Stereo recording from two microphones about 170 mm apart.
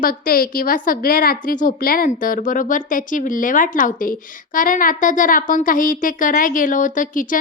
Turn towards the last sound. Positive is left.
turn(degrees=50)  # may be behind; listen again after turning